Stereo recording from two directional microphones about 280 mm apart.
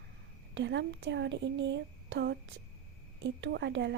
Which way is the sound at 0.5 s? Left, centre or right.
Right.